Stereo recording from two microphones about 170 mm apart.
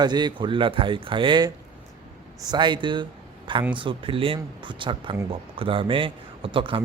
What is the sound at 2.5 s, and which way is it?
Speech, 25° right (ahead or behind).